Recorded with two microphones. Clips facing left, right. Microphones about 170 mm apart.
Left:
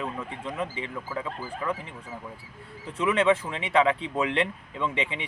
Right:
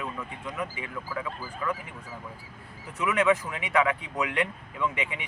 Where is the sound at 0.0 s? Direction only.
30° left (ahead or behind).